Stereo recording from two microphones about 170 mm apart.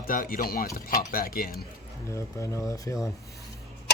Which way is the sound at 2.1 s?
15° left (ahead or behind).